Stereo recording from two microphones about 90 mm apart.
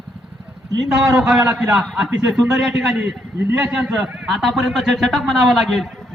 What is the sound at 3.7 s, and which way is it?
A man's voice, 10° right (ahead or behind).